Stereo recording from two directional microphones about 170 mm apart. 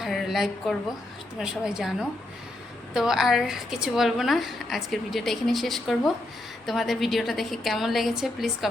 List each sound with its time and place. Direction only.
0.0 s a woman's voice: centre (ahead or behind)